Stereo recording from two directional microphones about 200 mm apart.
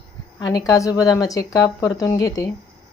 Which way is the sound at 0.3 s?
20° left (ahead or behind).